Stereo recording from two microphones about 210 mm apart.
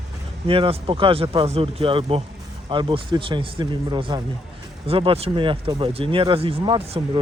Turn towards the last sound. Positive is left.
turn(degrees=-25)  # may be behind; listen again after turning